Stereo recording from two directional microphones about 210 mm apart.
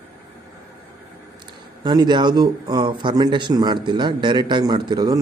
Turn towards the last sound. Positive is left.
turn(degrees=-20)  # may be behind; listen again after turning